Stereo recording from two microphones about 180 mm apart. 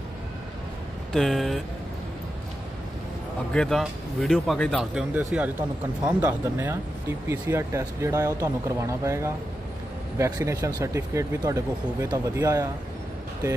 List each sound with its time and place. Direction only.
1.1 s speech: centre (ahead or behind)
3.5 s speech: centre (ahead or behind); by 12.6 s 20° right (ahead or behind)